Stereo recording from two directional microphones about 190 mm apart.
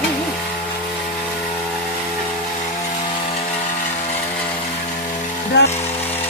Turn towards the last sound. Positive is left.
turn(degrees=60)  # may be behind; listen again after turning